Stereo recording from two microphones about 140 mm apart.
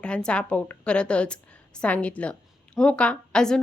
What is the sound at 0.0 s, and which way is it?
A woman's voice, 5° left (ahead or behind).